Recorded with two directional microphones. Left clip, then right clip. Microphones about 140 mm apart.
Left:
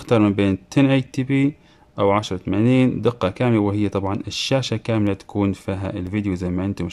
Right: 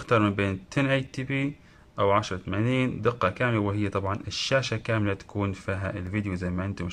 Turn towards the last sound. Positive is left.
turn(degrees=25)  # may be behind; listen again after turning